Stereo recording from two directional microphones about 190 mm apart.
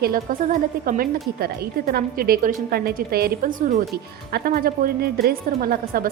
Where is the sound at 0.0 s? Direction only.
50° right (ahead or behind).